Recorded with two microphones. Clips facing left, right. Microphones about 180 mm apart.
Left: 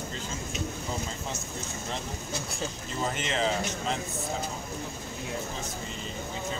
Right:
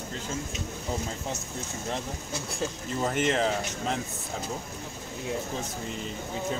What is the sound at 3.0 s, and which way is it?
Speech, 55° right (ahead or behind).